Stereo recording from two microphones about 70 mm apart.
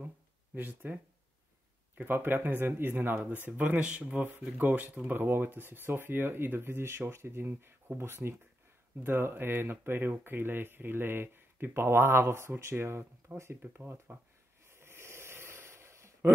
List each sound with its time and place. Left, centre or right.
0.6 s speech: right
2.0 s speech: right
14.7 s a sound: right